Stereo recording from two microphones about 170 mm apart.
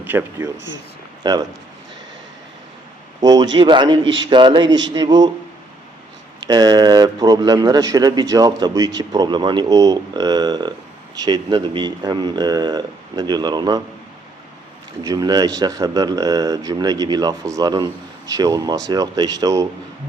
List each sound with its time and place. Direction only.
0.0 s speech: 15° right (ahead or behind)
1.2 s speech: 25° right (ahead or behind)
3.2 s speech: 25° right (ahead or behind)
4.6 s a man's voice: 90° right
4.9 s speech: 25° right (ahead or behind)
6.5 s speech: 20° right (ahead or behind)
15.0 s speech: 20° right (ahead or behind)